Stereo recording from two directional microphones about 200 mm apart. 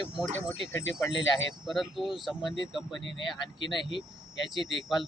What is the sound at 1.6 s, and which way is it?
Speech, centre (ahead or behind).